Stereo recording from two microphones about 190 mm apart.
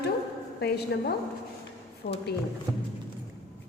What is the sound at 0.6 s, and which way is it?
Speech, 55° left (ahead or behind).